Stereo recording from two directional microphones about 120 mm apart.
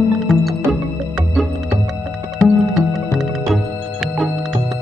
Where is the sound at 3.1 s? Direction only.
Centre (ahead or behind).